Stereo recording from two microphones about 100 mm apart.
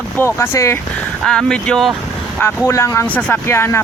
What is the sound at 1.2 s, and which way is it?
Speech, 5° left (ahead or behind).